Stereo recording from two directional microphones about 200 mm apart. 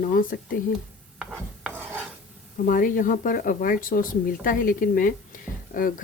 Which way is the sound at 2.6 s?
45° left (ahead or behind).